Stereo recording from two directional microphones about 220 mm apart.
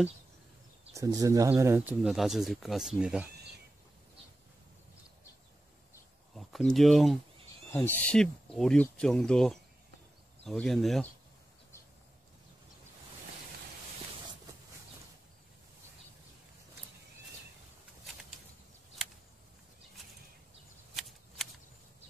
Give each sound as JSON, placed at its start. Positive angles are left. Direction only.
{"t": 0.9, "sound": "speech", "side_deg": -15}
{"t": 6.3, "sound": "speech", "side_deg": 0}